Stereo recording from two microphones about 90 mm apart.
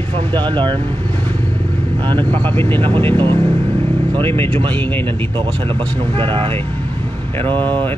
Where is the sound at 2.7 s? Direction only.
75° right (ahead or behind).